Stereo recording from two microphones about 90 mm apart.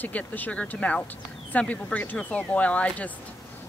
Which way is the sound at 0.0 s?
20° left (ahead or behind).